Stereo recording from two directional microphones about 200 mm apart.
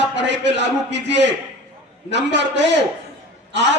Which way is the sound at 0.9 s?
60° right (ahead or behind).